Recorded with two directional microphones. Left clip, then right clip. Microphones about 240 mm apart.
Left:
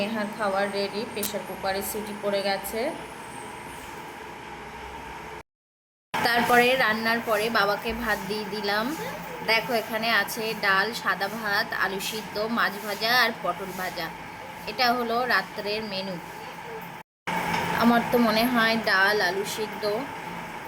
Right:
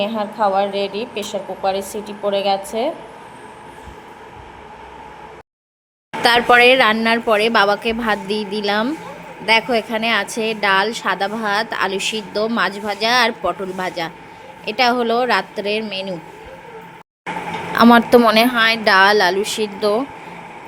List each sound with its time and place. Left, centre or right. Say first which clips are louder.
0.0 s speech: right 9 dB; right
6.2 s a woman's voice: right 10 dB; right
17.7 s a woman's voice: right 13 dB; right